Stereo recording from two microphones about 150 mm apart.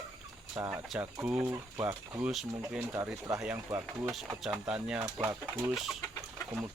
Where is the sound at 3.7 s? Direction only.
20° right (ahead or behind).